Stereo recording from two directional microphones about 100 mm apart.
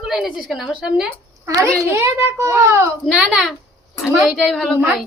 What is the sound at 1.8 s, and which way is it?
A child's voice, 30° right (ahead or behind).